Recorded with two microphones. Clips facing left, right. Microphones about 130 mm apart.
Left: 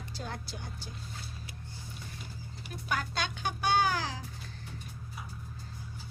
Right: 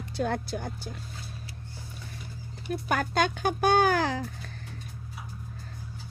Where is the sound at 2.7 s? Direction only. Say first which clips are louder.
Right 8 dB; 50° right (ahead or behind).